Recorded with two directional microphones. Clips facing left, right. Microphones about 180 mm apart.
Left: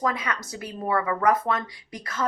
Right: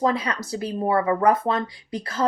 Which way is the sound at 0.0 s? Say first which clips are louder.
Right 5 dB; 30° right (ahead or behind).